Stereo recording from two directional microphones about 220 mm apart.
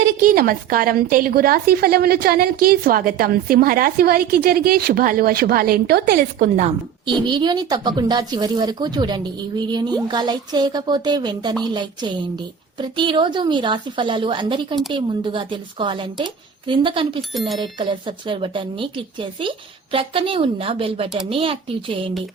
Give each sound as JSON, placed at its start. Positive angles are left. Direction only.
{"t": 0.2, "sound": "a woman's voice", "side_deg": -40}
{"t": 7.0, "sound": "a woman's voice", "side_deg": -20}